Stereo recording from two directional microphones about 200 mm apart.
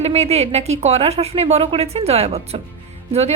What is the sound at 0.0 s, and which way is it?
A woman's voice, 30° right (ahead or behind).